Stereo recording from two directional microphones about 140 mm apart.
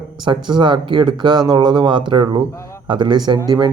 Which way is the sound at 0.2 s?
35° right (ahead or behind).